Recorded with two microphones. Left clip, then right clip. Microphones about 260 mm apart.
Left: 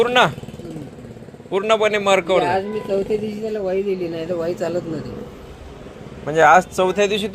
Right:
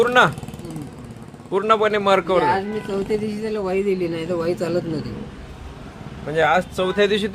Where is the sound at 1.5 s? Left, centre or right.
Centre.